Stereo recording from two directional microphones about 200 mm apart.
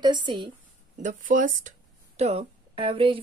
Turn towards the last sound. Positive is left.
turn(degrees=-25)  # may be behind; listen again after turning